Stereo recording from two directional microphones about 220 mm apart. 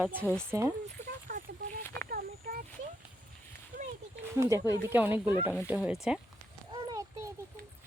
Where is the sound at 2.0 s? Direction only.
45° right (ahead or behind).